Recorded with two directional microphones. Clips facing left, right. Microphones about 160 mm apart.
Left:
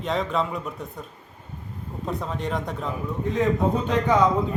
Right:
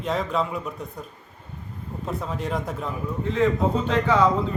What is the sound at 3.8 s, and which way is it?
Speech, 15° left (ahead or behind).